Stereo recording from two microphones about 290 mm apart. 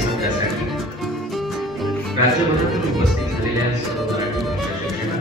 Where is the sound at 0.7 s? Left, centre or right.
Centre.